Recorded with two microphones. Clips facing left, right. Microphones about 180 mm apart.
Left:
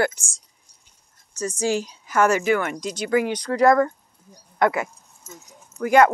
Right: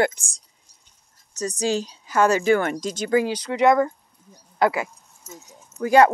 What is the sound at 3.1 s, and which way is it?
Speech, 30° right (ahead or behind).